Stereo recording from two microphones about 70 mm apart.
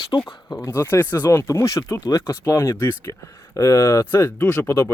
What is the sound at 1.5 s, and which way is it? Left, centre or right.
Speech, left.